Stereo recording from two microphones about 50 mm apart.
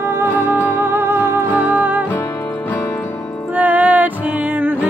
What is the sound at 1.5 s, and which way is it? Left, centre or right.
Music, right.